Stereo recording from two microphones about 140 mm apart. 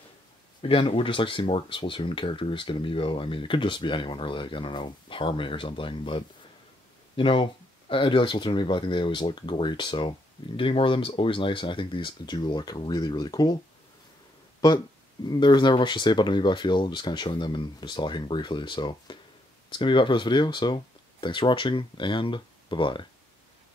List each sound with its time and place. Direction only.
0.6 s speech: 40° left (ahead or behind)
15.2 s speech: 30° left (ahead or behind)